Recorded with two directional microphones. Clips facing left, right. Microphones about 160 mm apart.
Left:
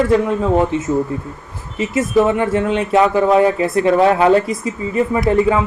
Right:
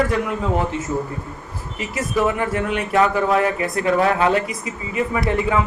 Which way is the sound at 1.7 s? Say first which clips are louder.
Left 7 dB; 25° left (ahead or behind).